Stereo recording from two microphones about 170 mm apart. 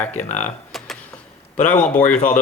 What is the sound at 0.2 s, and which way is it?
Speech, 45° left (ahead or behind).